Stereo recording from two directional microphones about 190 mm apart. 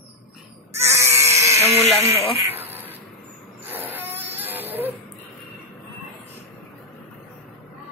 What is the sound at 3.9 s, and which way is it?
Vehicle, 10° right (ahead or behind).